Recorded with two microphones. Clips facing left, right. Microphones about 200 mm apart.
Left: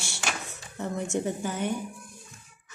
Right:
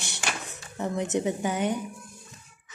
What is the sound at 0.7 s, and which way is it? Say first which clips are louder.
Speech: right 3 dB; 65° right (ahead or behind).